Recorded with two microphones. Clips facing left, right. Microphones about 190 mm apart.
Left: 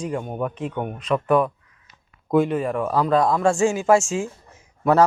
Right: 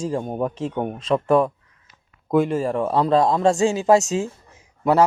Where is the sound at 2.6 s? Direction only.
30° right (ahead or behind).